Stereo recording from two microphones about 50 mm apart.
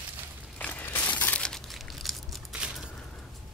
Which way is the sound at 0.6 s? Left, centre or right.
Left.